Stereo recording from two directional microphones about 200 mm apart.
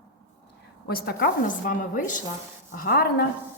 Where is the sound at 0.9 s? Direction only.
50° left (ahead or behind).